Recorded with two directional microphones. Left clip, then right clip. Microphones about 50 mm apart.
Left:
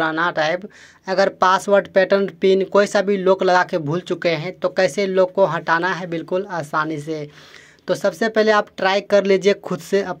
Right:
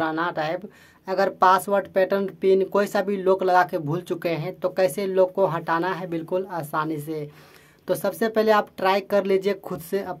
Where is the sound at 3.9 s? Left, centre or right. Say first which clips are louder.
Left 5 dB; left.